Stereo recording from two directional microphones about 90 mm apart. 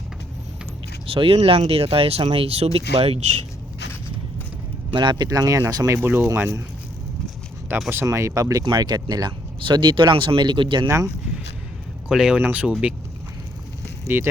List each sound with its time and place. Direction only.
1.1 s speech: 90° right
4.9 s speech: 55° right (ahead or behind); by 6.0 s 35° right (ahead or behind)
6.0 s speech: 25° right (ahead or behind)
7.7 s speech: 25° right (ahead or behind)
8.0 s speech: 35° right (ahead or behind); by 9.3 s 50° right (ahead or behind)
9.6 s speech: 65° right (ahead or behind)
10.8 s speech: 35° right (ahead or behind)
12.0 s speech: 10° right (ahead or behind)
14.1 s speech: 25° right (ahead or behind)